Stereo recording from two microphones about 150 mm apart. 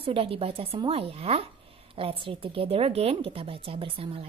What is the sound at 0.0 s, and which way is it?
A woman's voice, 40° right (ahead or behind).